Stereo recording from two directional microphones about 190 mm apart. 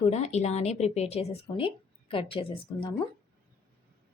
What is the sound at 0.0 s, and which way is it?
A woman's voice, 35° left (ahead or behind).